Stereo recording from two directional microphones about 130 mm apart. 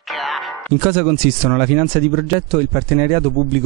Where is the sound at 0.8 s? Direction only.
10° right (ahead or behind).